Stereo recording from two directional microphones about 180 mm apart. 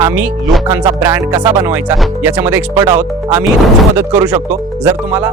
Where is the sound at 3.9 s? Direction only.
15° right (ahead or behind).